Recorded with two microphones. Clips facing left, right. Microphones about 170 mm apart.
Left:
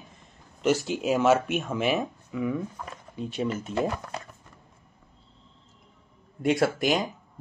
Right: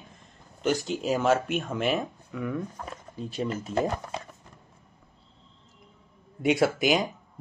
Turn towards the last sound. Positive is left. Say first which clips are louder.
# right 1 dB
turn(degrees=0)  # may be behind; listen again after turning